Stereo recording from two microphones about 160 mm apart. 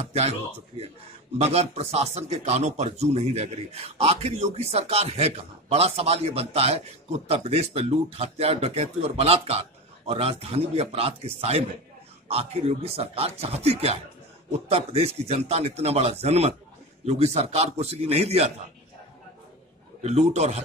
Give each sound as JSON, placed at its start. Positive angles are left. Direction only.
{"t": 0.1, "sound": "speech", "side_deg": -40}
{"t": 20.0, "sound": "a man's voice", "side_deg": -45}